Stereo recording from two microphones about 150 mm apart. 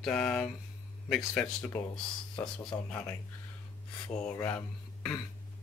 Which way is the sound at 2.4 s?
25° left (ahead or behind).